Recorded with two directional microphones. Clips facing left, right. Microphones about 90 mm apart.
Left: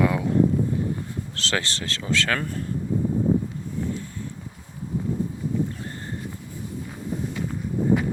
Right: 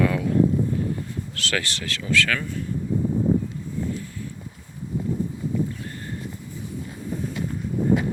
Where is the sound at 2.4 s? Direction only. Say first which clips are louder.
Left 1 dB; 45° left (ahead or behind).